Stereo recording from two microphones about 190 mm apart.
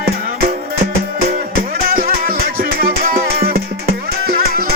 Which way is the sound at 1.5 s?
50° right (ahead or behind).